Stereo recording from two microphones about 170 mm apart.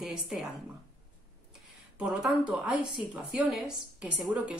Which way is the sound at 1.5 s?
5° right (ahead or behind).